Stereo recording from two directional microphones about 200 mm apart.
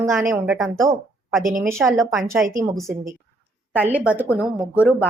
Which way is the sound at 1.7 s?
15° right (ahead or behind).